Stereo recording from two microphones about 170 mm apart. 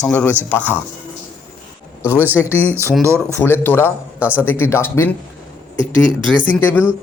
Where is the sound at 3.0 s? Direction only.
15° right (ahead or behind).